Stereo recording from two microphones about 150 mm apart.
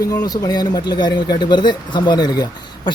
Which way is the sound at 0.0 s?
25° left (ahead or behind).